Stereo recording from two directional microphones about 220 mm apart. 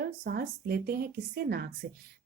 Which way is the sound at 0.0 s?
45° right (ahead or behind).